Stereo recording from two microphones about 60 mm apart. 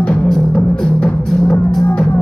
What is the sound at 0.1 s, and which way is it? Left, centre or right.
Music, centre.